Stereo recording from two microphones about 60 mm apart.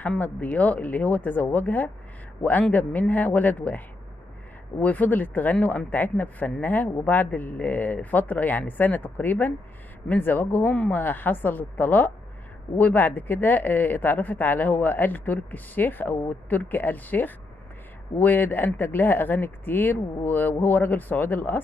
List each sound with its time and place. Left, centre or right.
0.2 s speech: left